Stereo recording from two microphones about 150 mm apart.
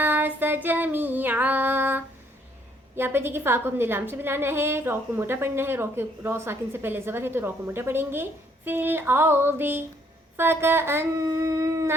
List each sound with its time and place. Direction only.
0.0 s a woman's voice: 10° right (ahead or behind)